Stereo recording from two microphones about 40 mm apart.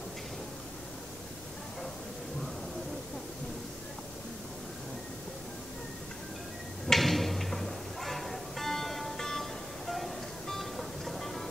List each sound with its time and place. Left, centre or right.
6.9 s music: centre